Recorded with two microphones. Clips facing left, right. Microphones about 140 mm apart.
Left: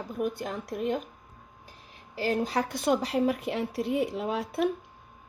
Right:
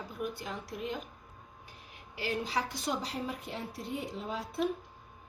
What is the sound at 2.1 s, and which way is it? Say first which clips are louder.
A woman's voice: left 6 dB; 45° left (ahead or behind).